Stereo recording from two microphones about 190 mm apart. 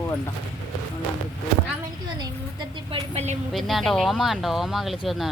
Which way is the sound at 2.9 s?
35° right (ahead or behind).